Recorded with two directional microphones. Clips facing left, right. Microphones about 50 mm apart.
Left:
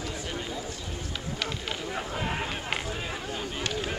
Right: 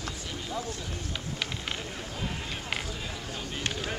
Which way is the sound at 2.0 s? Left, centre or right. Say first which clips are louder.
Left 5 dB; left.